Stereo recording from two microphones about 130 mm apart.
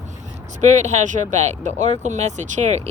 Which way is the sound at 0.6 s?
65° right (ahead or behind).